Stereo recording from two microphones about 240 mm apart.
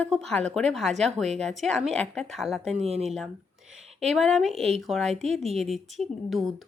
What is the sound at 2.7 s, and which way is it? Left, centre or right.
Speech, right.